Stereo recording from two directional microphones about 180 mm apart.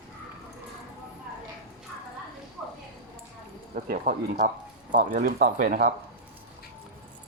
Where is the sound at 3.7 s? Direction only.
55° right (ahead or behind).